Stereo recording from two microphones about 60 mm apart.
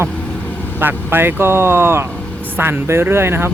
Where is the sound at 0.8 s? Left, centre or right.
Right.